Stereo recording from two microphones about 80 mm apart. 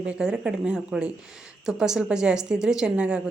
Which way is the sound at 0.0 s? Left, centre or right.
Centre.